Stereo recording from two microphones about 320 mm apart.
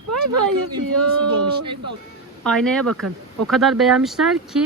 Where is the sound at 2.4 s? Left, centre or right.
Centre.